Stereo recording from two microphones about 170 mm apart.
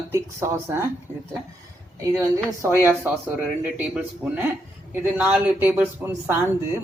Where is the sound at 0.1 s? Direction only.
15° right (ahead or behind).